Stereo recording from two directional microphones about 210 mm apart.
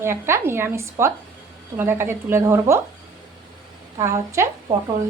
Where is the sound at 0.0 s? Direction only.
10° right (ahead or behind).